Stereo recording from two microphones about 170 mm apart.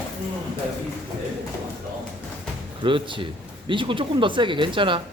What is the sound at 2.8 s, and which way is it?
Speech, 30° right (ahead or behind).